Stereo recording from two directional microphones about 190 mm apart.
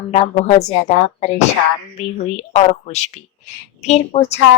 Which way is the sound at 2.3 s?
35° left (ahead or behind).